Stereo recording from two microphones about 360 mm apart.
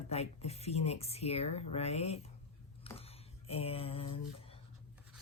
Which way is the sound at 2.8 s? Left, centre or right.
Centre.